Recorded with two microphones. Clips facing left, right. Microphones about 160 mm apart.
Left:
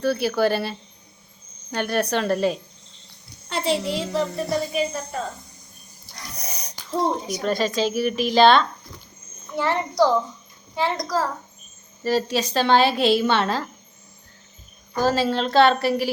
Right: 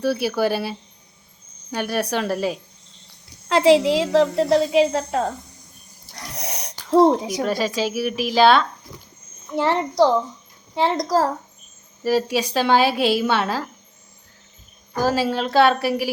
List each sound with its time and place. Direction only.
0.0 s a woman's voice: 10° right (ahead or behind)
3.5 s a woman's voice: 90° right
6.3 s a sound: 80° right
7.4 s a woman's voice: 10° right (ahead or behind)
9.6 s a child's voice: 25° right (ahead or behind)
12.0 s a woman's voice: 10° right (ahead or behind)
14.9 s a woman's voice: 10° right (ahead or behind)